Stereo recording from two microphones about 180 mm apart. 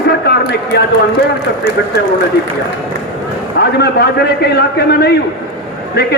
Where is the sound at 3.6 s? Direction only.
65° left (ahead or behind).